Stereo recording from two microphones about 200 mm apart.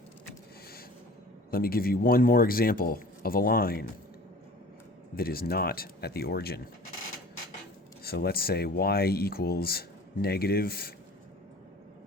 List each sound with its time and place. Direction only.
1.5 s speech: 50° left (ahead or behind)
5.1 s speech: 50° left (ahead or behind)
8.0 s speech: 50° left (ahead or behind)